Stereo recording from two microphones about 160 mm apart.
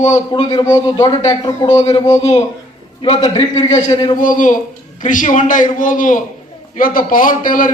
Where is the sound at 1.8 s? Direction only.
40° left (ahead or behind).